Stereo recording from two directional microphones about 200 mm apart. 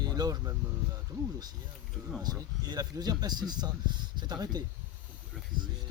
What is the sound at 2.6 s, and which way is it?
Speech, 20° right (ahead or behind).